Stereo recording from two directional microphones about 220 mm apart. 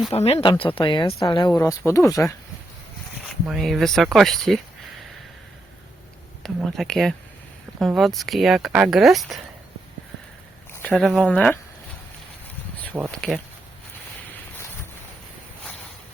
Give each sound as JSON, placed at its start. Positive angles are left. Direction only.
{"t": 0.1, "sound": "speech", "side_deg": 25}
{"t": 3.4, "sound": "speech", "side_deg": 0}
{"t": 6.4, "sound": "speech", "side_deg": 0}
{"t": 10.8, "sound": "speech", "side_deg": 0}
{"t": 13.1, "sound": "speech", "side_deg": 0}